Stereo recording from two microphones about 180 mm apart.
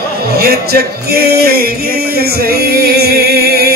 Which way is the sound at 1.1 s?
60° right (ahead or behind).